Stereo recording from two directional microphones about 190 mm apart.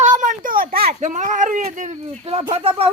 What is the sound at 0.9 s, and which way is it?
Speech, 40° right (ahead or behind).